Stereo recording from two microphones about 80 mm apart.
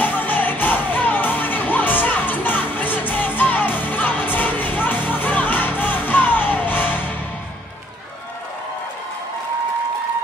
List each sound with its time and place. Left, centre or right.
0.0 s music: left